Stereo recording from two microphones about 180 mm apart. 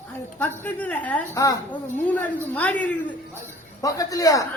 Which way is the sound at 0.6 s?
10° left (ahead or behind).